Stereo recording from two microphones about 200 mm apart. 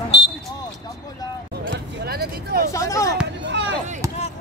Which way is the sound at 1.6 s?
55° right (ahead or behind).